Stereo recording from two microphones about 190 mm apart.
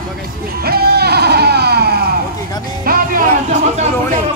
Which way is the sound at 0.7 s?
55° right (ahead or behind).